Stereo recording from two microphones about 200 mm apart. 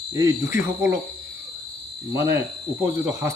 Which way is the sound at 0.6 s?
15° right (ahead or behind).